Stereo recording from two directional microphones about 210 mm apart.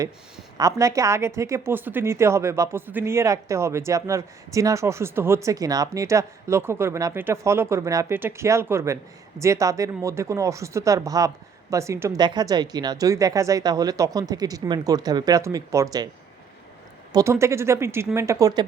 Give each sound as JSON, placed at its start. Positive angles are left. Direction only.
{"t": 0.5, "sound": "a woman's voice", "side_deg": -15}
{"t": 17.1, "sound": "a woman's voice", "side_deg": -15}